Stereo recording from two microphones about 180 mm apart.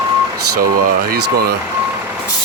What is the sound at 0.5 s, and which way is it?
Speech, 50° right (ahead or behind).